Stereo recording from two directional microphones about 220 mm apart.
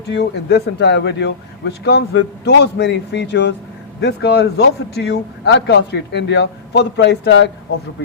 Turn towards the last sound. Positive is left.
turn(degrees=55)  # may be behind; listen again after turning